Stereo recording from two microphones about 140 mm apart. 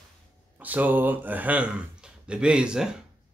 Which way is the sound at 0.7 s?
10° right (ahead or behind).